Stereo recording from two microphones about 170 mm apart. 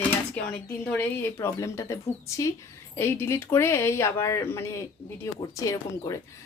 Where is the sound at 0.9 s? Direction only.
10° left (ahead or behind).